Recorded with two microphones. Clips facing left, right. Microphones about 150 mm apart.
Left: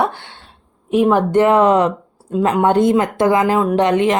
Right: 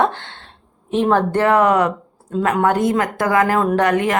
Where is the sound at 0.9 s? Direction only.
10° left (ahead or behind).